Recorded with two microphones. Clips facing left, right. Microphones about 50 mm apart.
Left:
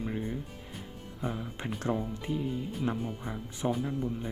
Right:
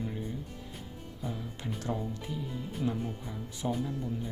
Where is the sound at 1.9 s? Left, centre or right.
Left.